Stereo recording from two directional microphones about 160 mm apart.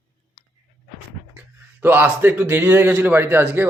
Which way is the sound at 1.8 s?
10° right (ahead or behind).